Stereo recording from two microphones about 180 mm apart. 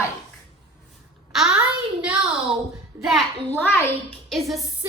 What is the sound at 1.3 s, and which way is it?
Speech, 5° right (ahead or behind).